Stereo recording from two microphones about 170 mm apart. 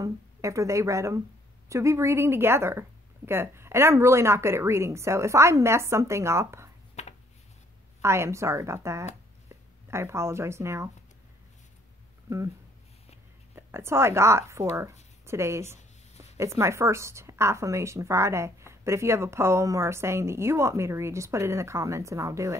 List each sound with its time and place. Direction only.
0.0 s a woman's voice: 20° right (ahead or behind)
7.0 s a sound: 40° left (ahead or behind)
8.0 s a woman's voice: 15° right (ahead or behind)
13.6 s a woman's voice: 15° right (ahead or behind)
15.2 s a sound: 15° right (ahead or behind)
16.3 s a woman's voice: 15° right (ahead or behind)